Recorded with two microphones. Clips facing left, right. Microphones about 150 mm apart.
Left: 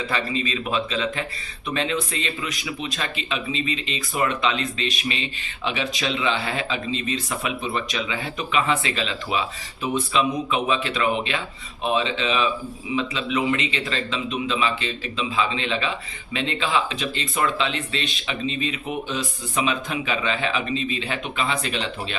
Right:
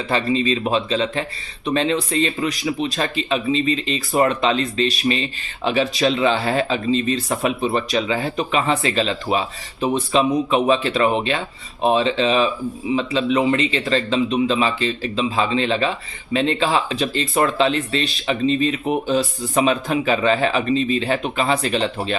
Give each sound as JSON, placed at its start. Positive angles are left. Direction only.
{"t": 0.1, "sound": "speech", "side_deg": -35}